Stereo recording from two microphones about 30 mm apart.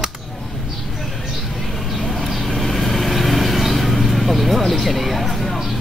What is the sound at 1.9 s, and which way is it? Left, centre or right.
Vehicle, centre.